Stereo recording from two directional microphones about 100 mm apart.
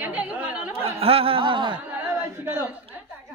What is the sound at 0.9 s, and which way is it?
Speech, 75° right (ahead or behind).